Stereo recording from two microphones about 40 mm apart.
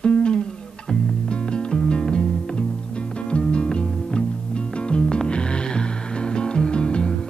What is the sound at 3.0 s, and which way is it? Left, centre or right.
Music, left.